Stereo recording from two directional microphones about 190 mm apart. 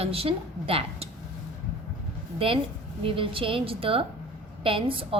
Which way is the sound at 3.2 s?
30° right (ahead or behind).